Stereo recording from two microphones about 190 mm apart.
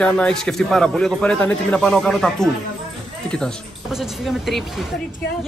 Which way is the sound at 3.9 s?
Centre (ahead or behind).